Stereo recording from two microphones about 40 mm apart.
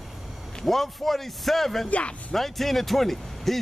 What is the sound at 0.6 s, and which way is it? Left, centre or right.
Speech, centre.